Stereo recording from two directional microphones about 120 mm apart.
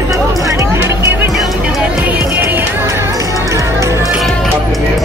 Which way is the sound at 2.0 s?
10° right (ahead or behind).